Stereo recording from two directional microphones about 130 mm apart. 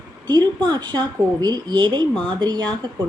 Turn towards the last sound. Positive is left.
turn(degrees=-35)  # may be behind; listen again after turning